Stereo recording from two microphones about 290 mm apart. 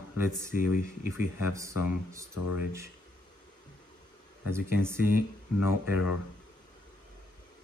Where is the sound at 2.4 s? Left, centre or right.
Left.